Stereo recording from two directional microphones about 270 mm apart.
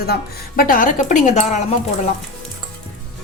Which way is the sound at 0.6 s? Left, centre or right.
Left.